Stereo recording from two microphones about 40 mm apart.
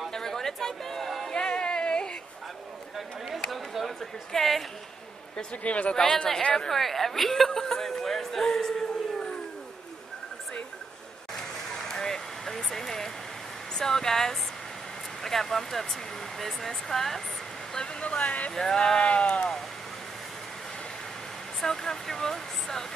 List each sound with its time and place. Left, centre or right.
0.1 s a sound: centre
1.3 s music: left
4.3 s speech: centre
5.6 s speech: left
5.9 s speech: centre
11.9 s a sound: centre
13.7 s speech: centre
18.0 s speech: left
18.5 s speech: centre
18.8 s speech: left
21.5 s speech: centre